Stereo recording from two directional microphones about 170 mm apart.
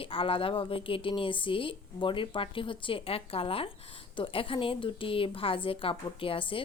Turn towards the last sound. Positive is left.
turn(degrees=30)  # may be behind; listen again after turning